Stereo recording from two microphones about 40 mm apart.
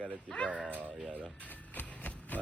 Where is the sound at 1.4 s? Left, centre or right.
Left.